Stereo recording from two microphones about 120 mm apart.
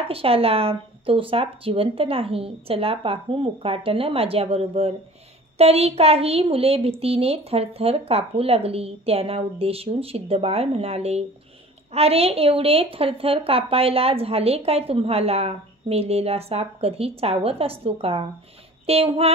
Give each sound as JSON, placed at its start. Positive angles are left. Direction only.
{"t": 0.1, "sound": "a child's voice", "side_deg": -50}